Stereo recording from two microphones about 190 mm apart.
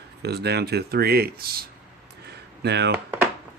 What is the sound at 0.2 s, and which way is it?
Speech, 60° right (ahead or behind).